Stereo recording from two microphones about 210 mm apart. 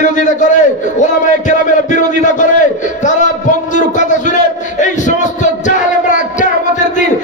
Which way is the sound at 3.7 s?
35° left (ahead or behind).